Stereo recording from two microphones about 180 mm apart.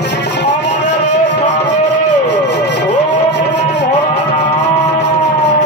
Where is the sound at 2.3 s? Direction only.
75° left (ahead or behind).